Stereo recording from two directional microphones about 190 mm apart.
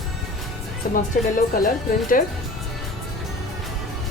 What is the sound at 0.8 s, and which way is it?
Speech, 50° left (ahead or behind).